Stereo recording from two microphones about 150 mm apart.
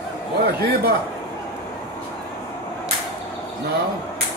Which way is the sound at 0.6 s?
90° right.